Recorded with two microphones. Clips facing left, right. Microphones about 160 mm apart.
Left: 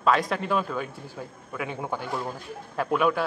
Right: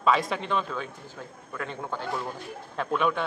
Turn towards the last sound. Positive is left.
turn(degrees=5)  # may be behind; listen again after turning